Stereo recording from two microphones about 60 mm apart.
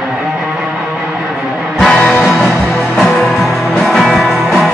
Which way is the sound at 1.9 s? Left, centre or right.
Centre.